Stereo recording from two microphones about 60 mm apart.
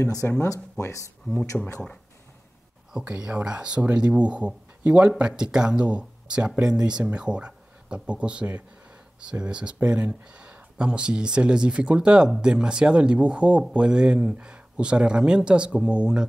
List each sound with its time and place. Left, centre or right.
0.4 s speech: left
1.6 s speech: centre
2.9 s speech: centre